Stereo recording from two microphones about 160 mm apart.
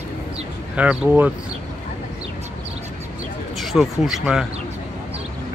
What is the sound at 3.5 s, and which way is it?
Speech, centre (ahead or behind).